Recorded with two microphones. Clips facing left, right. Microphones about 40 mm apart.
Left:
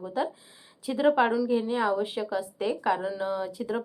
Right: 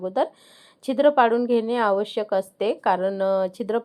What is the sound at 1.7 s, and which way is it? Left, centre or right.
Speech, right.